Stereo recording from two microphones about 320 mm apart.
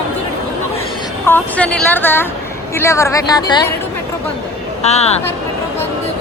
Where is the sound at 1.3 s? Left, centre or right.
Centre.